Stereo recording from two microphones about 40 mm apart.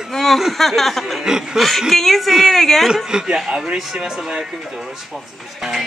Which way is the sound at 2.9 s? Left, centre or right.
Centre.